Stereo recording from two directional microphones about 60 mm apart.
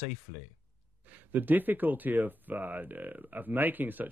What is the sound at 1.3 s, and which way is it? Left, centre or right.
Speech, right.